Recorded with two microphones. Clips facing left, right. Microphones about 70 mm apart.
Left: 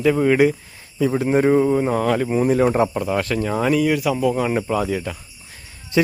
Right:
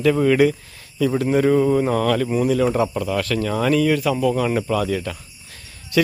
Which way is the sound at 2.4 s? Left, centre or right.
Left.